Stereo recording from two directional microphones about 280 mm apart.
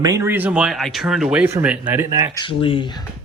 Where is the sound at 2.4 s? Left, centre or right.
Centre.